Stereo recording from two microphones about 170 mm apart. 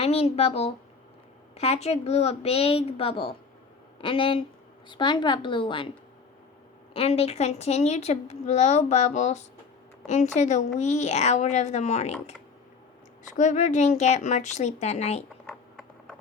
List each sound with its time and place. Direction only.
0.0 s a woman's voice: 35° left (ahead or behind)
6.9 s speech: 35° left (ahead or behind)
13.3 s speech: 45° left (ahead or behind)
15.4 s a sound: 5° left (ahead or behind)